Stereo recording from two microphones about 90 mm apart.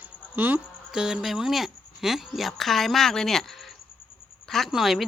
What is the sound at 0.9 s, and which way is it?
Speech, 5° right (ahead or behind).